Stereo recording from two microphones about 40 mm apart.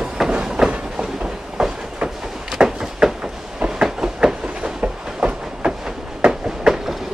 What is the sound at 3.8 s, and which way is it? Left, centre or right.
Train, centre.